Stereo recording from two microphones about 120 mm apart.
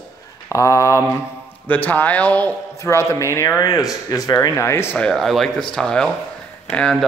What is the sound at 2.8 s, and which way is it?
Speech, 25° left (ahead or behind).